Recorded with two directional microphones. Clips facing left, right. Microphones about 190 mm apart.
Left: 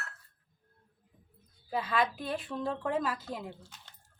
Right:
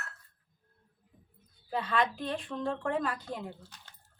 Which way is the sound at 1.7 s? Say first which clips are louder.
Even; 5° left (ahead or behind).